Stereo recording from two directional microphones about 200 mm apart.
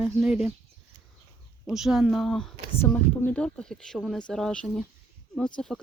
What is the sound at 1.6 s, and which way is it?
Speech, centre (ahead or behind).